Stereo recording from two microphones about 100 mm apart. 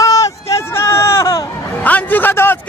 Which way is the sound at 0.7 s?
25° left (ahead or behind).